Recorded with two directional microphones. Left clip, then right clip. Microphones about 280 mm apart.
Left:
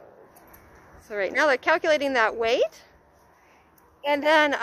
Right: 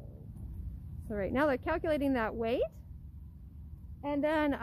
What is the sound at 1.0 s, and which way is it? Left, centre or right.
Speech, centre.